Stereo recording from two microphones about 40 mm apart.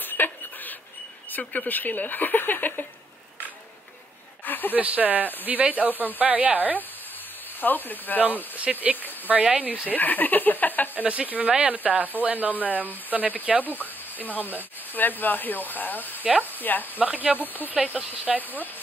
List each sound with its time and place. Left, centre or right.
0.0 s a sound: left
1.7 s speech: left
4.5 s a sound: left
4.7 s speech: right
7.6 s speech: left
8.5 s speech: right
9.8 s speech: left
11.2 s speech: right
13.7 s speech: left
17.0 s speech: right